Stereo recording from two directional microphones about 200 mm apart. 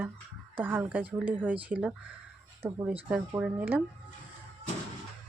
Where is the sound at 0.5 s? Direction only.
10° right (ahead or behind).